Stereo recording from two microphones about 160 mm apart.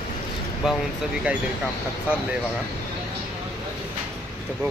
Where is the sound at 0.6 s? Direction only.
5° right (ahead or behind).